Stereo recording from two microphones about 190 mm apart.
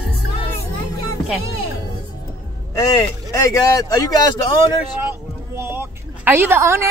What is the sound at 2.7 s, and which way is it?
Speech, 15° left (ahead or behind).